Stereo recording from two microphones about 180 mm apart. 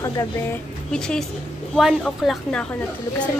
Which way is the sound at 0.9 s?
5° left (ahead or behind).